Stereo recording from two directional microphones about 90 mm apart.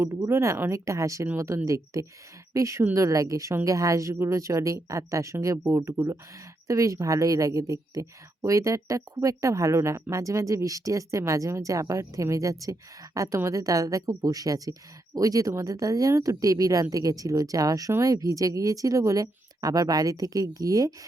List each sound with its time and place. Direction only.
0.0 s a woman's voice: 30° right (ahead or behind)